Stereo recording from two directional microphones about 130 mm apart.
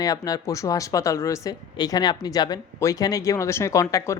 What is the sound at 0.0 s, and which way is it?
Speech, 30° left (ahead or behind).